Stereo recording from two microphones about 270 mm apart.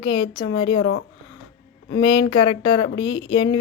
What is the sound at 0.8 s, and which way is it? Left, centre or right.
Speech, left.